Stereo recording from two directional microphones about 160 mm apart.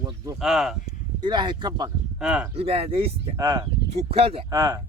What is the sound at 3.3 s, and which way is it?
Speech, 20° right (ahead or behind).